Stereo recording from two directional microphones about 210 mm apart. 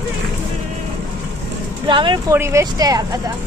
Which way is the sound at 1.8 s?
20° right (ahead or behind).